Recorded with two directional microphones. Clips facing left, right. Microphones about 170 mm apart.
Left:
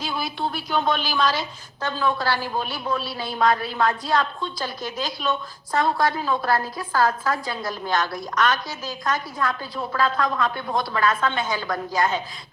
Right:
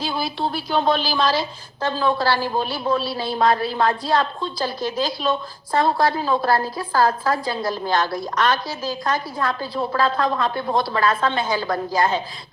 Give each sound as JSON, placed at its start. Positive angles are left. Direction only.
{"t": 0.0, "sound": "a woman's voice", "side_deg": -30}